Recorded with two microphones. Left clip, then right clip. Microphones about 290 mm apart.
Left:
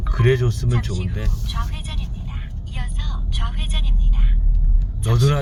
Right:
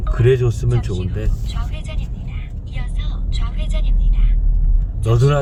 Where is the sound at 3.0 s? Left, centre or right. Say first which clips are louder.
Left 5 dB; left.